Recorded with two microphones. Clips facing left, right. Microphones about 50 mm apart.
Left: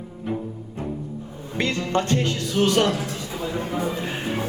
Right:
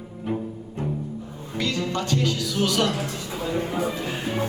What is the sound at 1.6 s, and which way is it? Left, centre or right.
Speech, left.